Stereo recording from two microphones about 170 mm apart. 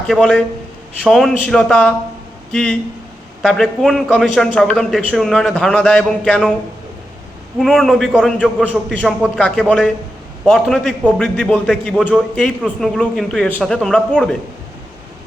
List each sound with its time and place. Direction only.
0.1 s a man's voice: centre (ahead or behind)
7.6 s a man's voice: centre (ahead or behind)